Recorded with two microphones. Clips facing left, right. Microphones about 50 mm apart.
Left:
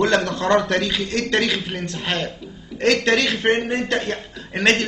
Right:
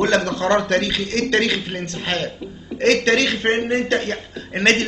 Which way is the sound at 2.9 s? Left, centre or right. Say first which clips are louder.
Right 1 dB; centre.